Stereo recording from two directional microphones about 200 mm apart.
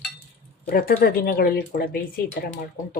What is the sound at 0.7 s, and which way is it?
Speech, 45° left (ahead or behind).